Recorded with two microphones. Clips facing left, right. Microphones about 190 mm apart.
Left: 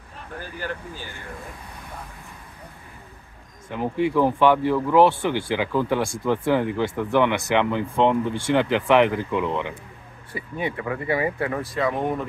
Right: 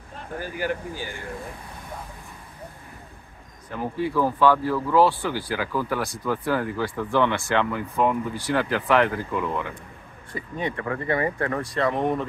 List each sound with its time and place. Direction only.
0.4 s speech: 10° right (ahead or behind)
3.7 s speech: 20° left (ahead or behind); by 12.3 s 5° left (ahead or behind)